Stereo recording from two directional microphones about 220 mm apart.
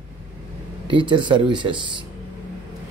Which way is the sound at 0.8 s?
20° right (ahead or behind).